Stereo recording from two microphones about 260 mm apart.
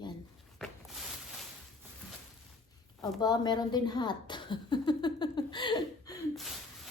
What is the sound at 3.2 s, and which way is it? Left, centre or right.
Speech, centre.